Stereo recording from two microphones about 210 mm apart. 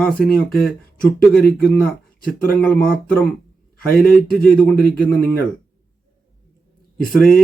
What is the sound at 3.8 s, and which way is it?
Speech, 45° left (ahead or behind).